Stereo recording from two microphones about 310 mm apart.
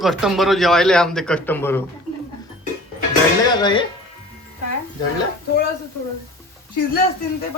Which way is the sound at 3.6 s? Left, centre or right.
Centre.